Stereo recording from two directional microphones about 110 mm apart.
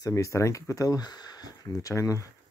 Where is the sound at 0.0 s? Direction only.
30° left (ahead or behind).